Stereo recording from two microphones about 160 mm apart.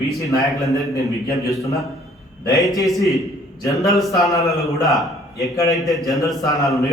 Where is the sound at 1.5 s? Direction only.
20° left (ahead or behind).